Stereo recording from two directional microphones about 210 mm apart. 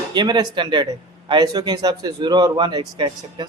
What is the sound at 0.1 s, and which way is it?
Speech, 20° right (ahead or behind).